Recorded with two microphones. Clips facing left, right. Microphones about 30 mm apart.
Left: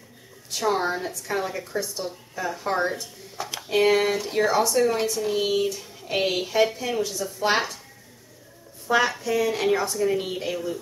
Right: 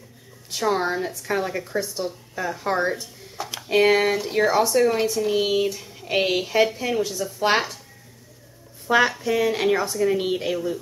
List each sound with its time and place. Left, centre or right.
0.5 s speech: centre
8.8 s speech: centre